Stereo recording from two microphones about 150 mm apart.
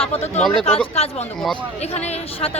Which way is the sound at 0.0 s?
45° left (ahead or behind).